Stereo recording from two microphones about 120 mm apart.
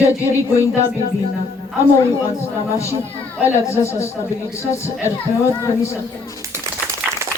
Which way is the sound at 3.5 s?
25° left (ahead or behind).